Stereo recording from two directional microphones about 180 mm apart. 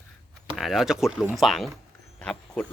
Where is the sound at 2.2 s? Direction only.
5° left (ahead or behind).